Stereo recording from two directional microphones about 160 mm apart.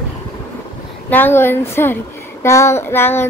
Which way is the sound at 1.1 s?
10° left (ahead or behind).